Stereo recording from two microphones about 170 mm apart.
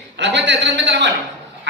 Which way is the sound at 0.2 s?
90° right.